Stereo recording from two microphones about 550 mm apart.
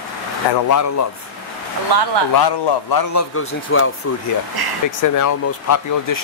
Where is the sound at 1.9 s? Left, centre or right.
Right.